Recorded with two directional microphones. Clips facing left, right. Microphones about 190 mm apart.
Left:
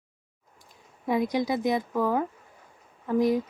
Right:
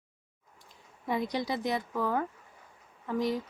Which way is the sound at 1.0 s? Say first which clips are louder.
Left 6 dB; 15° left (ahead or behind).